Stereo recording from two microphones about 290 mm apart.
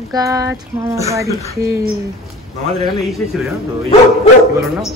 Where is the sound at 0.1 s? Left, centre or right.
Centre.